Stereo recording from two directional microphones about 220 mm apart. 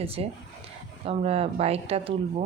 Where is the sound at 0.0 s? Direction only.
25° right (ahead or behind).